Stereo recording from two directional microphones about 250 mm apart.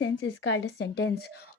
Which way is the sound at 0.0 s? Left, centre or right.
Left.